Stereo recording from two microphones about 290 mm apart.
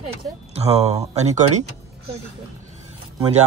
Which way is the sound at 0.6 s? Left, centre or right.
Right.